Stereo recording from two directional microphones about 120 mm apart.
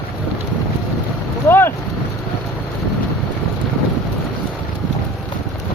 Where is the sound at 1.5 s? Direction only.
20° left (ahead or behind).